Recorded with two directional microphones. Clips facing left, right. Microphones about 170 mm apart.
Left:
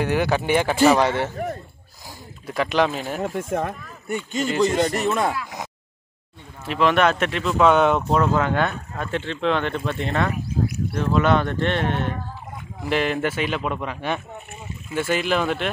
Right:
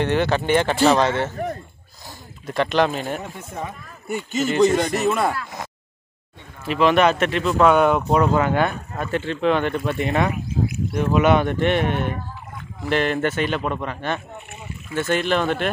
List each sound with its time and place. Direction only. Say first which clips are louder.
0.0 s speech: right 1 dB; 10° left (ahead or behind)
3.4 s speech: left 7 dB; 90° left
4.1 s speech: right 2 dB; 5° right (ahead or behind)
5.3 s speech: even; 15° left (ahead or behind)
6.6 s speech: right 2 dB; centre (ahead or behind)
12.8 s speech: right 1 dB; 5° left (ahead or behind)